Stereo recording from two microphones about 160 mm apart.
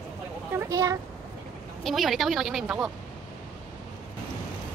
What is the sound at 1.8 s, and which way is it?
A woman's voice, centre (ahead or behind).